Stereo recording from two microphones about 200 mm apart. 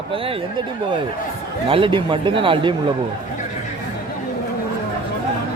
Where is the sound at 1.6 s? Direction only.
25° right (ahead or behind).